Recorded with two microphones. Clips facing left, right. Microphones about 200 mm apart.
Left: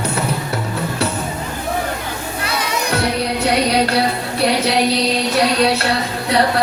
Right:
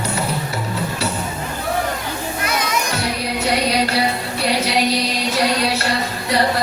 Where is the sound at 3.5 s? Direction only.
60° left (ahead or behind).